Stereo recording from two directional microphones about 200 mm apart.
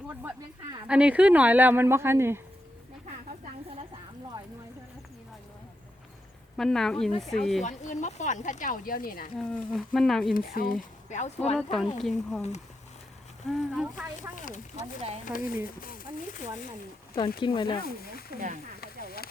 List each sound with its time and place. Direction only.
0.9 s speech: 5° right (ahead or behind)
6.6 s speech: 5° left (ahead or behind)
7.6 s speech: 35° left (ahead or behind)
9.4 s speech: 5° left (ahead or behind)
10.3 s speech: 45° left (ahead or behind)
11.5 s speech: centre (ahead or behind)
12.4 s speech: 35° left (ahead or behind)
13.5 s speech: centre (ahead or behind)
14.2 s speech: 40° left (ahead or behind)
17.4 s speech: 25° left (ahead or behind)
18.3 s speech: 40° right (ahead or behind)
18.8 s a sound: 50° left (ahead or behind)